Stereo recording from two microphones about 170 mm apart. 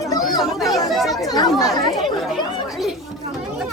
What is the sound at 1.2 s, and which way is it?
Speech, 20° left (ahead or behind).